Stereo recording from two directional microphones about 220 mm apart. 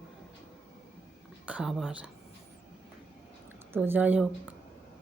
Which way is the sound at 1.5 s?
5° right (ahead or behind).